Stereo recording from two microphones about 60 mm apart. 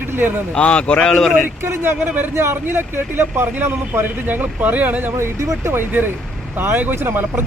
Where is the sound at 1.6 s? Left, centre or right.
Right.